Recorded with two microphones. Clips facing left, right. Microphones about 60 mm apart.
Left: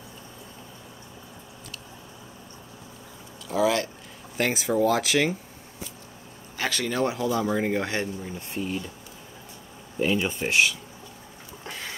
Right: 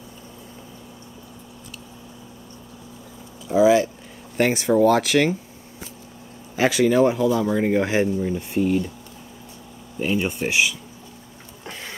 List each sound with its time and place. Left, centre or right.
3.4 s speech: centre
6.5 s speech: centre
8.2 s speech: right
10.4 s speech: centre
11.6 s a sound: centre